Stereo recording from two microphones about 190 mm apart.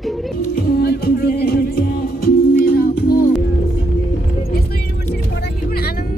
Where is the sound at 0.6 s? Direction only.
55° left (ahead or behind).